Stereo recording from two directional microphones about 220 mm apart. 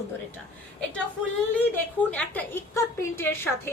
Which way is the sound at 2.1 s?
5° left (ahead or behind).